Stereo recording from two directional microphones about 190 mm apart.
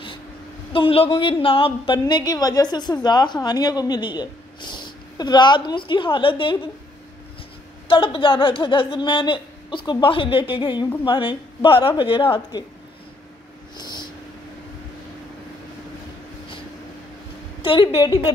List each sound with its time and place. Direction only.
0.7 s a woman's voice: 30° left (ahead or behind)
7.9 s a woman's voice: 25° left (ahead or behind)
13.7 s a sound: 20° left (ahead or behind)
17.6 s a woman's voice: 25° left (ahead or behind)